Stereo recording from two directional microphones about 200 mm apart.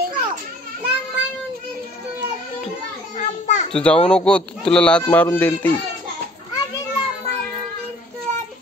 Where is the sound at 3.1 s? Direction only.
35° left (ahead or behind).